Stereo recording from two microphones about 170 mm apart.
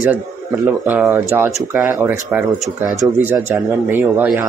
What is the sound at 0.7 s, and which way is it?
Speech, 10° right (ahead or behind).